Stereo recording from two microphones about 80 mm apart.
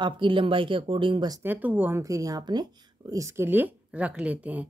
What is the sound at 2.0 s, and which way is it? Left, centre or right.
Speech, right.